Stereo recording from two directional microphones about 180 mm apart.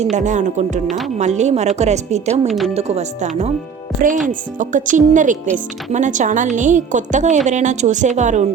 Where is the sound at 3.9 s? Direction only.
Centre (ahead or behind).